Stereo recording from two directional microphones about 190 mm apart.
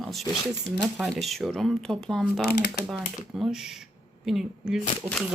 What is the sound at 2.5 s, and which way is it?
Speech, 60° left (ahead or behind).